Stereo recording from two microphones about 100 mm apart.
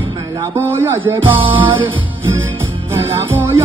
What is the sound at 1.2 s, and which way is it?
Music, 60° right (ahead or behind).